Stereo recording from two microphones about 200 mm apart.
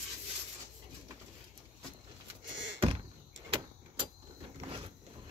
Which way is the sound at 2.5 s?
65° right (ahead or behind).